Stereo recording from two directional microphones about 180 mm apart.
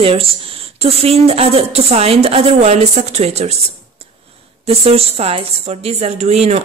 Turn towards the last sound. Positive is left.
turn(degrees=-35)  # may be behind; listen again after turning